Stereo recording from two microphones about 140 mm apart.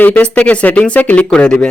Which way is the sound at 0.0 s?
10° left (ahead or behind).